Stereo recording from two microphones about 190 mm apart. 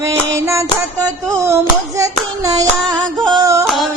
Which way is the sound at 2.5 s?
20° right (ahead or behind).